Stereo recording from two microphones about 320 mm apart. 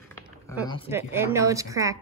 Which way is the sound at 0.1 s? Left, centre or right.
Centre.